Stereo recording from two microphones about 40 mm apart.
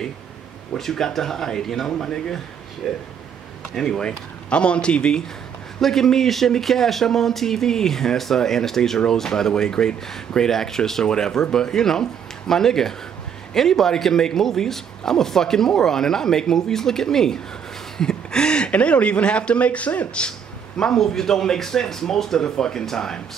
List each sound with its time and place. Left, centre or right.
0.7 s speech: centre
2.8 s speech: centre
3.7 s speech: centre
4.5 s a man's voice: left
5.8 s speech: centre
17.9 s a sound: centre
18.7 s speech: left
20.2 s speech: centre